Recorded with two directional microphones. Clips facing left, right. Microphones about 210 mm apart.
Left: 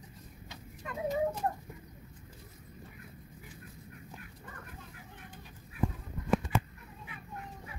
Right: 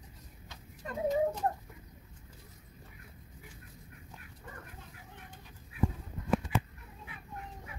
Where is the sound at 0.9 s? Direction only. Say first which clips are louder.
Right 2 dB; 35° right (ahead or behind).